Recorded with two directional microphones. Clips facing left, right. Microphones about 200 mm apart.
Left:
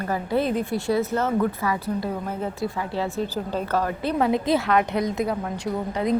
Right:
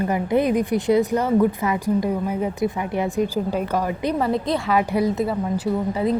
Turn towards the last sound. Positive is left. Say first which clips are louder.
# right 4 dB
turn(degrees=-5)  # may be behind; listen again after turning